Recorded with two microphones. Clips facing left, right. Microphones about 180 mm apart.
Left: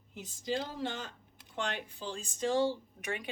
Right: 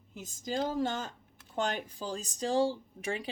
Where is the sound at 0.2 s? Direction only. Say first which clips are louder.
Right 2 dB; 45° right (ahead or behind).